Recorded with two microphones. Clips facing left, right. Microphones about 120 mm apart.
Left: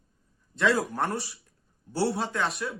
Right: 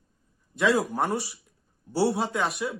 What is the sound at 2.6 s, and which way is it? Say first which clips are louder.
Speech: right 3 dB; 15° right (ahead or behind).